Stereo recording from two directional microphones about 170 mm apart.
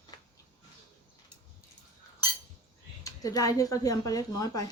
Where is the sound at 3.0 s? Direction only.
20° left (ahead or behind).